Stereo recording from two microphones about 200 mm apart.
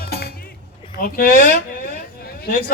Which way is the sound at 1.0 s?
45° left (ahead or behind).